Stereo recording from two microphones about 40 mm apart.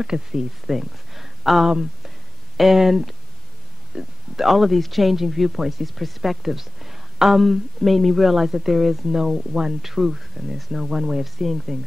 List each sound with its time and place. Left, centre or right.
0.0 s speech: centre
3.9 s speech: centre
4.4 s speech: centre